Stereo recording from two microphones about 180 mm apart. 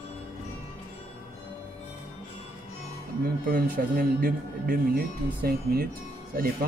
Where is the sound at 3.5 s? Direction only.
55° right (ahead or behind).